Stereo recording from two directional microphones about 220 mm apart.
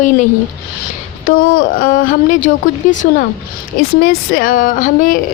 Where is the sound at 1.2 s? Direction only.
40° left (ahead or behind).